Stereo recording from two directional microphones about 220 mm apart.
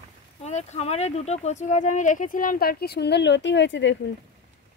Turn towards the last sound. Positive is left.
turn(degrees=55)  # may be behind; listen again after turning